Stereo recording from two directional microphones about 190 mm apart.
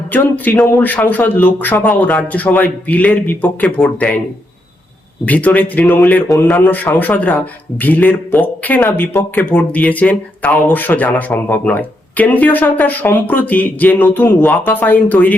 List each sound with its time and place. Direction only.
0.1 s speech: 10° left (ahead or behind)
5.2 s speech: 10° left (ahead or behind)